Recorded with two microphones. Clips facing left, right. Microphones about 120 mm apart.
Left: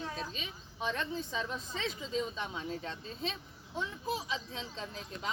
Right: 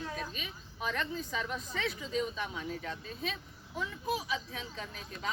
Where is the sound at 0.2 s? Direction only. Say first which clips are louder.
Even; 25° left (ahead or behind).